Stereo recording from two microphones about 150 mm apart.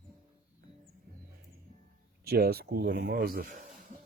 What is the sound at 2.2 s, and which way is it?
Speech, 90° right.